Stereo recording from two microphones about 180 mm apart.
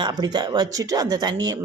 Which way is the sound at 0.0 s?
25° right (ahead or behind).